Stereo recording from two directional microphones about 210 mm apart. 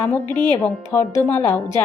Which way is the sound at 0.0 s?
10° left (ahead or behind).